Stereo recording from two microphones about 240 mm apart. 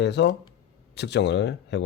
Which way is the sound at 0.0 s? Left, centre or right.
Left.